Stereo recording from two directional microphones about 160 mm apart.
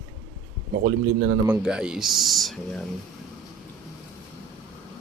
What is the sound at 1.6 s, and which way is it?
Speech, 5° right (ahead or behind).